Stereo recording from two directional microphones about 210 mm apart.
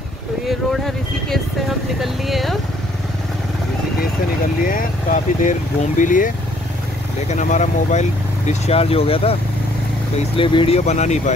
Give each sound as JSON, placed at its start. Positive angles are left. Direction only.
{"t": 0.5, "sound": "speech", "side_deg": 0}
{"t": 2.0, "sound": "vehicle", "side_deg": 0}
{"t": 4.6, "sound": "speech", "side_deg": 40}